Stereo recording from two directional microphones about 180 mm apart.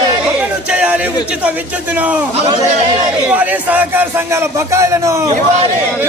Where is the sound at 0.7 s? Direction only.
5° right (ahead or behind).